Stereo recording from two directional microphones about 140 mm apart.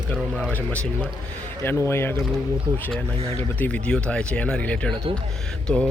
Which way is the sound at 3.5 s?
10° left (ahead or behind).